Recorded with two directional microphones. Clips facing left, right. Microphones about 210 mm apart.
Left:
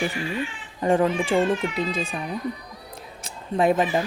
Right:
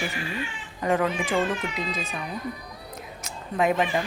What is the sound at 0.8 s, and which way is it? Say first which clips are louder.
Speech: left 4 dB; 30° left (ahead or behind).